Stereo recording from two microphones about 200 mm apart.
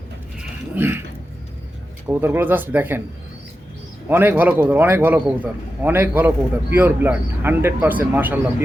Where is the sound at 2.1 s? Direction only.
10° right (ahead or behind).